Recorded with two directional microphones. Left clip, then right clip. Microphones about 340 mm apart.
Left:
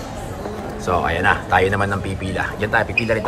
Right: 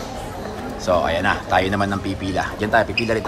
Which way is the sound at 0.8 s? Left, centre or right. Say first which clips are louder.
Even; centre.